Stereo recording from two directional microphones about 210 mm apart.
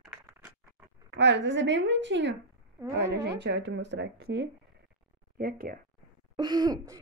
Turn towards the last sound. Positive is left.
turn(degrees=-20)  # may be behind; listen again after turning